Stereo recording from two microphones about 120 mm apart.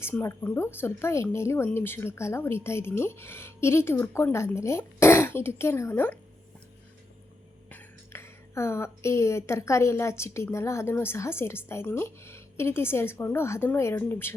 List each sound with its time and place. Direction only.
0.0 s a woman's voice: 20° left (ahead or behind)
7.7 s a woman's voice: 15° left (ahead or behind)